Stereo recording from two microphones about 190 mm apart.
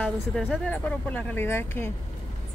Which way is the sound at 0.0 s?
5° left (ahead or behind).